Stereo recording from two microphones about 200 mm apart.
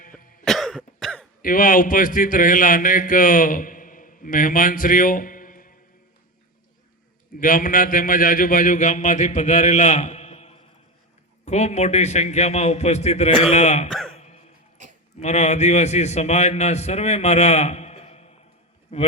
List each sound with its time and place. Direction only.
0.0 s cough: 45° left (ahead or behind)
0.4 s cough: centre (ahead or behind)
1.4 s a man's voice: 45° left (ahead or behind)
7.3 s a man's voice: 45° left (ahead or behind)
13.9 s speech: centre (ahead or behind)
14.2 s dog: 35° left (ahead or behind)
14.8 s sheep: 40° right (ahead or behind)
15.2 s a man's voice: 35° left (ahead or behind)